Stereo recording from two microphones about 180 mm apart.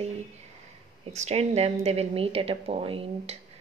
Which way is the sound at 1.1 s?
35° right (ahead or behind).